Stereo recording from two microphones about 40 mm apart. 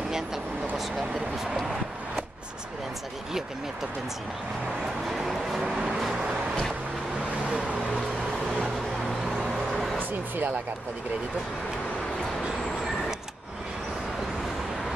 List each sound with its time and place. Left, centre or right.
5.1 s speech: centre
7.4 s vehicle: right
9.0 s music: centre
10.3 s speech: right